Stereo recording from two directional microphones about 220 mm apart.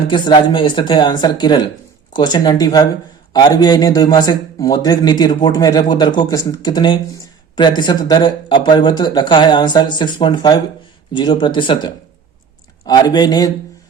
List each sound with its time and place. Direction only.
0.1 s a man's voice: 20° left (ahead or behind)